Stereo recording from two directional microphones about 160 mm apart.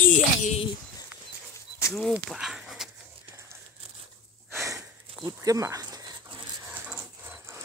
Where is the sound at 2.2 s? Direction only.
5° right (ahead or behind).